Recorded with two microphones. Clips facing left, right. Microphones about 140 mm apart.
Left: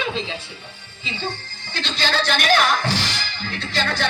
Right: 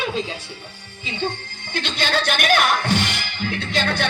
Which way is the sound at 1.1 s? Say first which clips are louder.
Right 3 dB; 55° right (ahead or behind).